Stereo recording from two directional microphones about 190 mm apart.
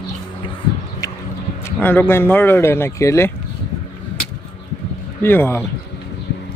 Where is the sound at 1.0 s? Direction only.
15° left (ahead or behind).